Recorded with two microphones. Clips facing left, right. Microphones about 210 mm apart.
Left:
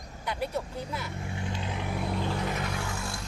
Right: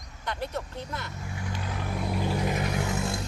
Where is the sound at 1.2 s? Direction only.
25° left (ahead or behind).